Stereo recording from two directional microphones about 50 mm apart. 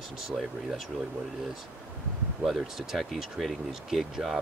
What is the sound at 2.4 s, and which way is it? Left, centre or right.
Speech, centre.